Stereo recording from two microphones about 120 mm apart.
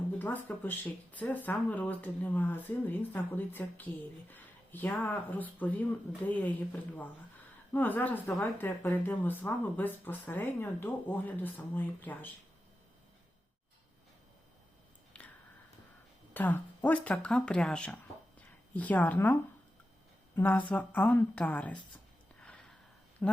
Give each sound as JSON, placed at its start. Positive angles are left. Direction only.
{"t": 0.2, "sound": "speech", "side_deg": 15}
{"t": 7.7, "sound": "speech", "side_deg": 15}
{"t": 15.1, "sound": "a sound", "side_deg": 10}
{"t": 16.3, "sound": "speech", "side_deg": 15}
{"t": 22.4, "sound": "a sound", "side_deg": 10}
{"t": 23.2, "sound": "speech", "side_deg": 10}